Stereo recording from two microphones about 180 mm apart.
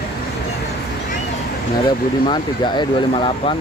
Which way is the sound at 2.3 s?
25° left (ahead or behind).